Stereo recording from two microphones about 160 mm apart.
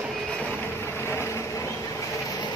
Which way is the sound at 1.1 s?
15° left (ahead or behind).